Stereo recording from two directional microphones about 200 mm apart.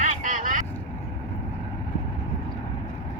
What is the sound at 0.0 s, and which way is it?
Vehicle, 40° right (ahead or behind).